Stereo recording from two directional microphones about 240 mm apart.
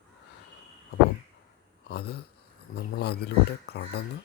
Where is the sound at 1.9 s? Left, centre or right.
Left.